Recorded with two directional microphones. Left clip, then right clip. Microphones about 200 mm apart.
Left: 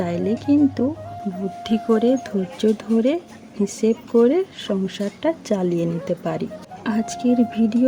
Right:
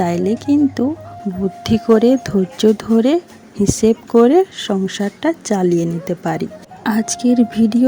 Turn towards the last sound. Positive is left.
turn(degrees=-25)  # may be behind; listen again after turning